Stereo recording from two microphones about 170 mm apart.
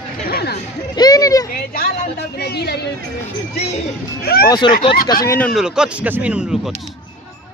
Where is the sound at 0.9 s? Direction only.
20° left (ahead or behind).